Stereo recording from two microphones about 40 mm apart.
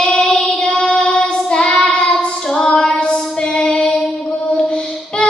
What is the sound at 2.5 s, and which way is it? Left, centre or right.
Female singing, left.